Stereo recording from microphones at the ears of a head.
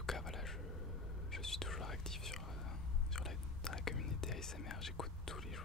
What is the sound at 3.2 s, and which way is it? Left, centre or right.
Whispering, left.